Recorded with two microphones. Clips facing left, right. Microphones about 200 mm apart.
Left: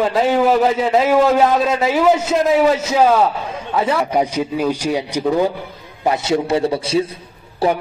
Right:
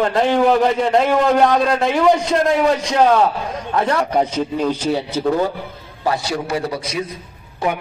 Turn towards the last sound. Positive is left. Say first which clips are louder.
# left 4 dB
turn(degrees=35)  # may be behind; listen again after turning